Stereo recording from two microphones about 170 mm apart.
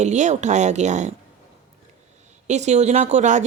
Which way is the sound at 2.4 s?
45° right (ahead or behind).